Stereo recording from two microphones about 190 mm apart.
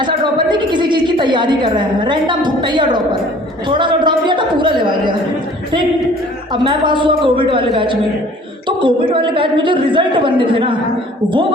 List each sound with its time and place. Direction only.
0.0 s a woman's voice: 25° right (ahead or behind)
6.5 s a woman's voice: 25° right (ahead or behind)